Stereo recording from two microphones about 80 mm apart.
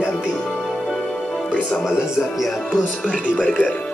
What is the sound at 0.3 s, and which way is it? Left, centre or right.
Music, centre.